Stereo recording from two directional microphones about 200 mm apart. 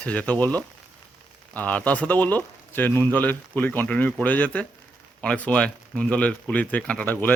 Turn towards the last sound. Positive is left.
turn(degrees=10)  # may be behind; listen again after turning